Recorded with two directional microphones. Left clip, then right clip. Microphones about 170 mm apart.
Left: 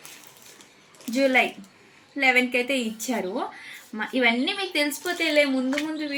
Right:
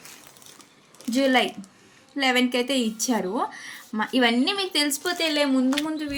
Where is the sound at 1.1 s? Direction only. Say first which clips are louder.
Even; 80° right.